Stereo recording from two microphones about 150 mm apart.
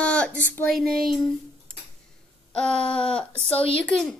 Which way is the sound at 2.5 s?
5° left (ahead or behind).